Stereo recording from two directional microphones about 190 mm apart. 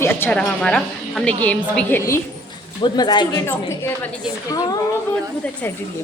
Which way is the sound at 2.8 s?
20° left (ahead or behind).